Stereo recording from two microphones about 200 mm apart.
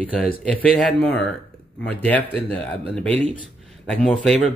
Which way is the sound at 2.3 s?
5° left (ahead or behind).